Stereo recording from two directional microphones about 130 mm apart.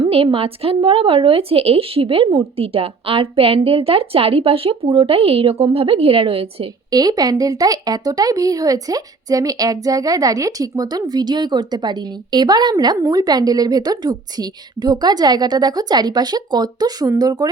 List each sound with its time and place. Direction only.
0.0 s a woman's voice: 45° right (ahead or behind)
6.9 s a woman's voice: 30° right (ahead or behind)